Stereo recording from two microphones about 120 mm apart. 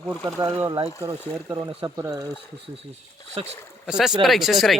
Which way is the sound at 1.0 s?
30° right (ahead or behind).